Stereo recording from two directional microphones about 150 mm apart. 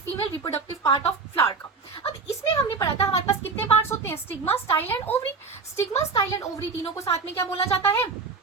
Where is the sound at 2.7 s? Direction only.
20° left (ahead or behind).